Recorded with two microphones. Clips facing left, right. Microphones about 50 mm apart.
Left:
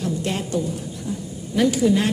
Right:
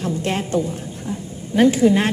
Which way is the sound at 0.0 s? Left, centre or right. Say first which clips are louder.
Right 2 dB; right.